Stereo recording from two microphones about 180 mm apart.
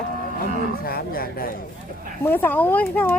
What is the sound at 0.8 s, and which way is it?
Speech, 55° left (ahead or behind).